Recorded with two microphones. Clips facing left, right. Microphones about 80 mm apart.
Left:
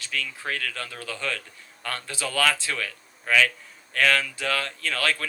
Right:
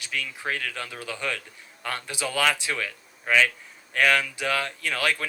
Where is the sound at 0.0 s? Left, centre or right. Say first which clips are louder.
Even; centre.